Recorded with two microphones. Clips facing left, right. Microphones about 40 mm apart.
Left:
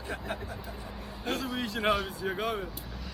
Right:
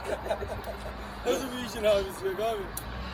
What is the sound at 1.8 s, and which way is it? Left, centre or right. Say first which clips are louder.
Speech: right 4 dB; left.